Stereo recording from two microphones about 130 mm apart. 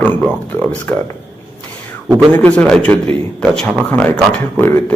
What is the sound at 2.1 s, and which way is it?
A man's voice, 10° left (ahead or behind).